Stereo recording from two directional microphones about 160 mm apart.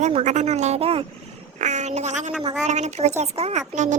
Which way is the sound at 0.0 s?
45° right (ahead or behind).